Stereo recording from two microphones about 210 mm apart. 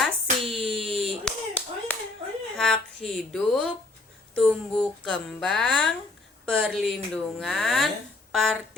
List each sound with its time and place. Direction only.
0.0 s clapping: centre (ahead or behind)
2.6 s speech: 5° left (ahead or behind)